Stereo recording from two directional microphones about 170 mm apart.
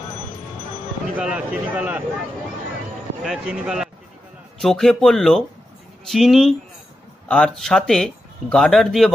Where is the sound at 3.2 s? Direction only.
5° right (ahead or behind).